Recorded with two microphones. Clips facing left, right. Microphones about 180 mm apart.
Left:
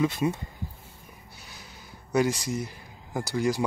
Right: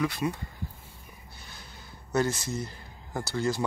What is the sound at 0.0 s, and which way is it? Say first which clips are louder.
Speech: left 4 dB; 25° left (ahead or behind).